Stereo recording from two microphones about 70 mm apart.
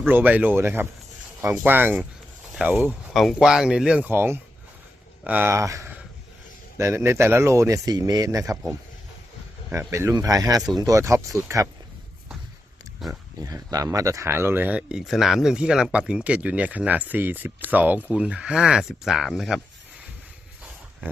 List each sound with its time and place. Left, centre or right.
0.1 s speech: right
3.1 s speech: centre
4.0 s speech: right
5.2 s speech: right
5.5 s speech: right
7.9 s speech: right
9.7 s speech: right
13.0 s speech: centre
13.4 s speech: right
14.8 s speech: centre
15.0 s speech: centre; by 18.0 s right
18.1 s speech: centre